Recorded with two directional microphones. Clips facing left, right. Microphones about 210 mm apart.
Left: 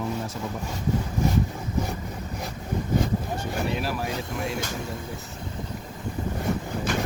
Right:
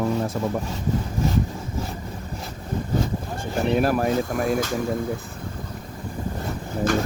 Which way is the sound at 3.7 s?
50° right (ahead or behind).